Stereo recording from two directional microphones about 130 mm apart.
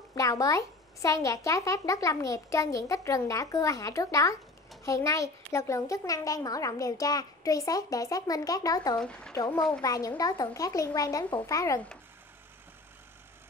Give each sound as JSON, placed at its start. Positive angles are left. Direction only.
{"t": 0.1, "sound": "a child's voice", "side_deg": 25}
{"t": 8.9, "sound": "speech", "side_deg": 5}
{"t": 9.6, "sound": "a child's voice", "side_deg": 30}